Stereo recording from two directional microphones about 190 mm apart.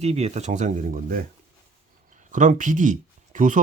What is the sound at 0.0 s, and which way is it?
Speech, 35° right (ahead or behind).